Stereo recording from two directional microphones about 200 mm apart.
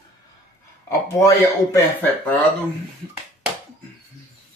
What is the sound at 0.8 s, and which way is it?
Speech, 15° left (ahead or behind).